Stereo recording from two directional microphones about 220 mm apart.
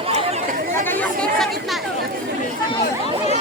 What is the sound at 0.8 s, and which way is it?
Chatter, 5° left (ahead or behind).